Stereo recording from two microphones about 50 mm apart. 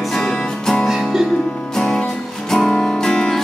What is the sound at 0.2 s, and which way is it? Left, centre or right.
Music, centre.